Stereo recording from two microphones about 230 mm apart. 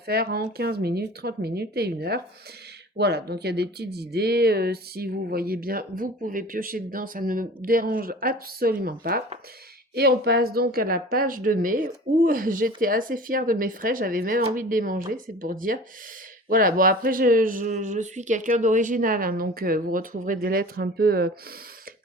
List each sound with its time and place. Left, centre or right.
0.0 s speech: right